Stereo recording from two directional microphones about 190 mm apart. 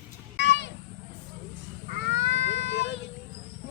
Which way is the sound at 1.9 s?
70° left (ahead or behind).